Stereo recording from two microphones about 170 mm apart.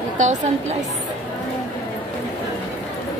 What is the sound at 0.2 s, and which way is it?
Speech, 45° right (ahead or behind).